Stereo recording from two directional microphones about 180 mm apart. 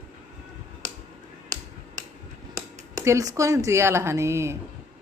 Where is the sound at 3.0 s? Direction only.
20° right (ahead or behind).